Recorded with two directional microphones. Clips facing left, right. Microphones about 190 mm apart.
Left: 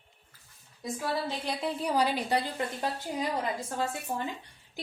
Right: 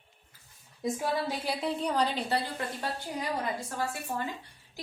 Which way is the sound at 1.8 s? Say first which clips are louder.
Left 4 dB; 10° left (ahead or behind).